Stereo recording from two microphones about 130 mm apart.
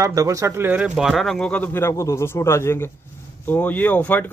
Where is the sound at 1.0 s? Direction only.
Centre (ahead or behind).